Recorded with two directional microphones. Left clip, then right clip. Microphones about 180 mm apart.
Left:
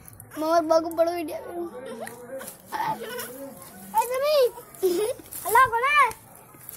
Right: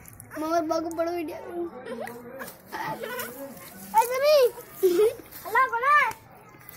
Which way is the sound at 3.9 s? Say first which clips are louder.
Right 2 dB; 25° right (ahead or behind).